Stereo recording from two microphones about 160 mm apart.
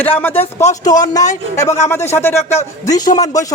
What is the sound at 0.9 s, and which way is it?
A man's voice, 25° left (ahead or behind).